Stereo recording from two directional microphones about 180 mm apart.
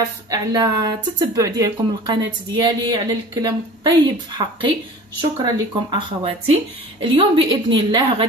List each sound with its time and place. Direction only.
0.3 s speech: 20° right (ahead or behind)